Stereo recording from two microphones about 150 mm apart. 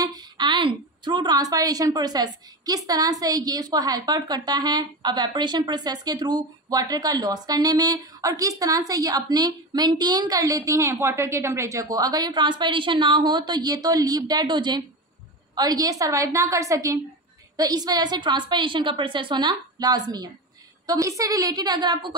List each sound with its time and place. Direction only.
0.0 s a woman's voice: 25° right (ahead or behind)